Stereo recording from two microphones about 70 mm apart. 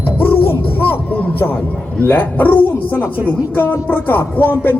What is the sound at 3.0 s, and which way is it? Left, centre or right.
Speech, right.